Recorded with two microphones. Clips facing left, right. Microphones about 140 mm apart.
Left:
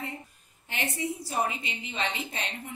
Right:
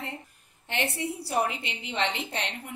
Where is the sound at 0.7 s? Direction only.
70° right (ahead or behind).